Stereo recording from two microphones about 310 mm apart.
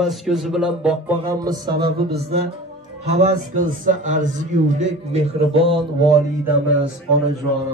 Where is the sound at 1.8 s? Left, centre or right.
Right.